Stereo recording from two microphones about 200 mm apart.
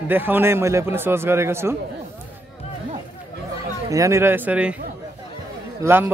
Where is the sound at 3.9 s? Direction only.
15° right (ahead or behind).